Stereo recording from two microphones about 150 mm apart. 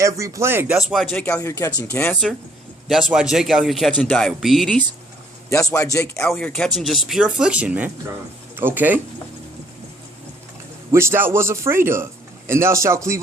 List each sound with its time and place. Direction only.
0.0 s a man's voice: 20° right (ahead or behind)
0.8 s speech: centre (ahead or behind)
1.4 s speech: 20° left (ahead or behind)
2.8 s speech: centre (ahead or behind)
5.5 s speech: 20° left (ahead or behind)
6.2 s speech: 5° left (ahead or behind); by 9.0 s 10° right (ahead or behind)
10.9 s a man's voice: 15° right (ahead or behind)